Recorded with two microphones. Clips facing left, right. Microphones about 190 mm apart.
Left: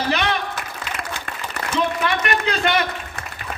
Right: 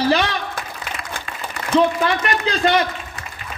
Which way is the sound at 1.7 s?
35° right (ahead or behind).